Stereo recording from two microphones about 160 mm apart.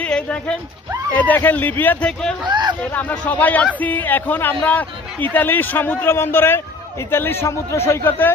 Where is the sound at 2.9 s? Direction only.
10° left (ahead or behind).